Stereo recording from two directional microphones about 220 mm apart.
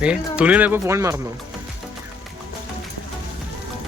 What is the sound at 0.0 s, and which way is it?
Speech, 5° right (ahead or behind).